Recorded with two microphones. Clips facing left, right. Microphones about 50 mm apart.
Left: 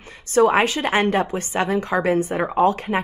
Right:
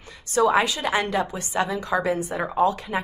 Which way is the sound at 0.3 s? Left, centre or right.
Left.